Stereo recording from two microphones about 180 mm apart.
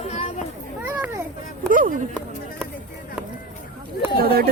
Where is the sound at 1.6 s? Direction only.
50° right (ahead or behind).